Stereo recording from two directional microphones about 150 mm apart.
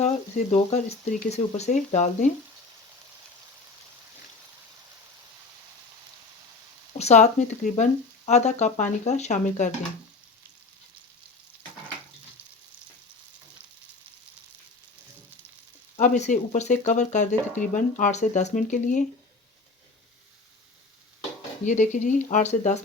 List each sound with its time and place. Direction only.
0.0 s speech: 50° left (ahead or behind)
7.0 s speech: 50° left (ahead or behind)
16.0 s speech: 55° left (ahead or behind)
21.6 s speech: 55° left (ahead or behind)